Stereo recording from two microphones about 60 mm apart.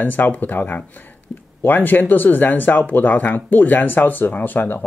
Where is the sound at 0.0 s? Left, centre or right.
Left.